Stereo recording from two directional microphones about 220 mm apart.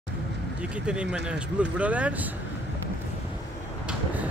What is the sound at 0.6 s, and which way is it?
Speech, 5° right (ahead or behind).